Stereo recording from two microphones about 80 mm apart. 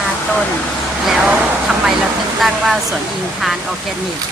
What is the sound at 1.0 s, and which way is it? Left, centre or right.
Speech, centre.